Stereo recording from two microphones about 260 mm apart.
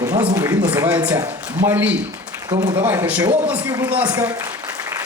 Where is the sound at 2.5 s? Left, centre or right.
Right.